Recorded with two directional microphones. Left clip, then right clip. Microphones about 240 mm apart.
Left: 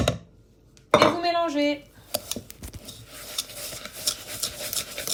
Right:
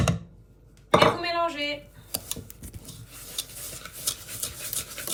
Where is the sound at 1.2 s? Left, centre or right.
Centre.